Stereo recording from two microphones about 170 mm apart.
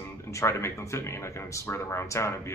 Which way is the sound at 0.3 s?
15° left (ahead or behind).